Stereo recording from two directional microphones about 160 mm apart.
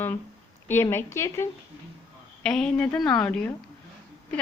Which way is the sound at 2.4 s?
5° left (ahead or behind).